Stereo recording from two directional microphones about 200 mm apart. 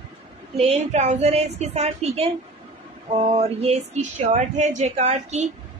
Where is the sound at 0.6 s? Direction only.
30° right (ahead or behind).